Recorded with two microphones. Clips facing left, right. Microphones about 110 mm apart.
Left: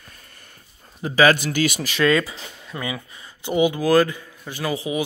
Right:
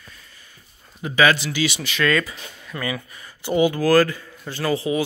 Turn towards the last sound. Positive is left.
turn(degrees=15)  # may be behind; listen again after turning